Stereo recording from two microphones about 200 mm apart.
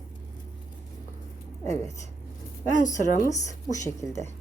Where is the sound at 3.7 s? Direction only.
15° left (ahead or behind).